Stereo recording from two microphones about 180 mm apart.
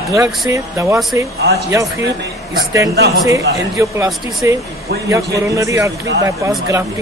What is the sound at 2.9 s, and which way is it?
Speech, 65° right (ahead or behind).